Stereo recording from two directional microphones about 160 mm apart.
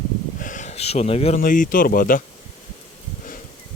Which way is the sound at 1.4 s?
55° left (ahead or behind).